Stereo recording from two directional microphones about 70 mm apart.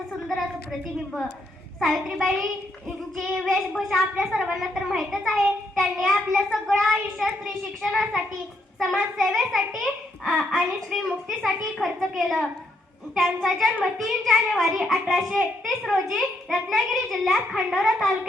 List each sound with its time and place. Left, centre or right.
1.8 s a child's voice: centre